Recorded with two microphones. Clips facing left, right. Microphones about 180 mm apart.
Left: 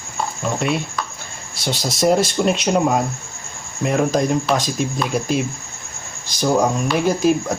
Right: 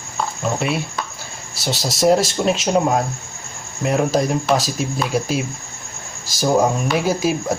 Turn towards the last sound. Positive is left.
turn(degrees=-5)  # may be behind; listen again after turning